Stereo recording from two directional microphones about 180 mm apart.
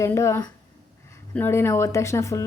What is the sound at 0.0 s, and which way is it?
Speech, 15° left (ahead or behind).